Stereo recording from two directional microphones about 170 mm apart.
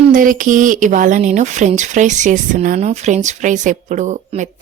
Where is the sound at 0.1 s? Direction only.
50° right (ahead or behind).